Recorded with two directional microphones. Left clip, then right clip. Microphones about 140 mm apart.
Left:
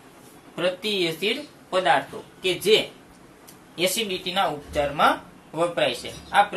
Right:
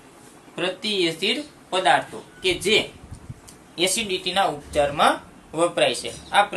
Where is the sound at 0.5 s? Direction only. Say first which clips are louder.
Even; 40° right (ahead or behind).